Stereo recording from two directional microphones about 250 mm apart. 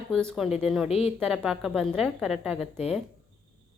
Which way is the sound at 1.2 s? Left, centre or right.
Centre.